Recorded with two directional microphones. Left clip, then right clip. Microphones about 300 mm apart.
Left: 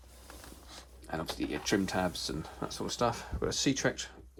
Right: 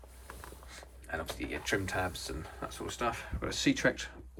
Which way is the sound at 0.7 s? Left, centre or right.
Centre.